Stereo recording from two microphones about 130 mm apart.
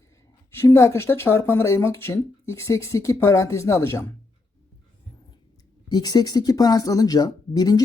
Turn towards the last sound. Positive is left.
turn(degrees=30)  # may be behind; listen again after turning